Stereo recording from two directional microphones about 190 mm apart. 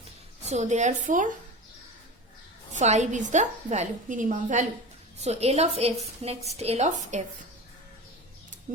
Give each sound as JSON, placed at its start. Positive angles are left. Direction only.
{"t": 0.4, "sound": "a woman's voice", "side_deg": -35}
{"t": 2.7, "sound": "a woman's voice", "side_deg": -35}